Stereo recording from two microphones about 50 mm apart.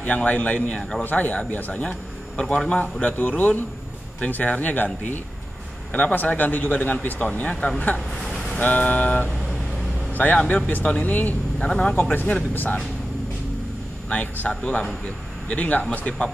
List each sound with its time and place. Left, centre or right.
0.0 s speech: left
0.7 s a man's voice: centre
1.0 s a man's voice: left
11.6 s speech: left
11.9 s a man's voice: left
14.0 s a man's voice: left
14.5 s speech: left